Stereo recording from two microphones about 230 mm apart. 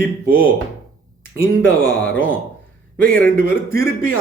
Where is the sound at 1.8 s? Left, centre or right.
Left.